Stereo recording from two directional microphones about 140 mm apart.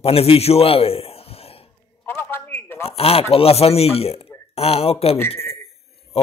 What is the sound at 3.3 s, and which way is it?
A man's voice, 45° left (ahead or behind).